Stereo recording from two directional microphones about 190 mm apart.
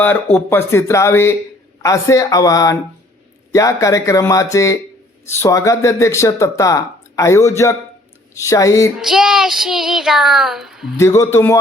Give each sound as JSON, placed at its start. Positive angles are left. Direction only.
{"t": 0.0, "sound": "speech", "side_deg": 10}
{"t": 9.0, "sound": "child singing", "side_deg": 0}
{"t": 10.9, "sound": "speech", "side_deg": 15}